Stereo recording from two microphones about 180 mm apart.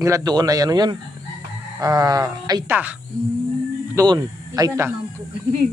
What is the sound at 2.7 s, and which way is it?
Speech, 10° right (ahead or behind).